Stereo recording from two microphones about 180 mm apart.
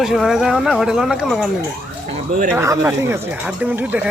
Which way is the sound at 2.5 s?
15° right (ahead or behind).